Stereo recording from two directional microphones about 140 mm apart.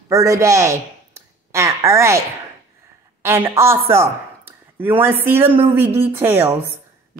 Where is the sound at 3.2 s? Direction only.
20° right (ahead or behind).